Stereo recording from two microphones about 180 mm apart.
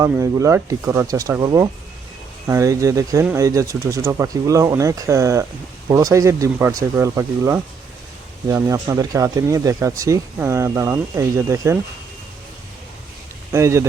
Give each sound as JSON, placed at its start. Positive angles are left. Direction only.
{"t": 0.0, "sound": "speech", "side_deg": -15}
{"t": 13.5, "sound": "speech", "side_deg": -15}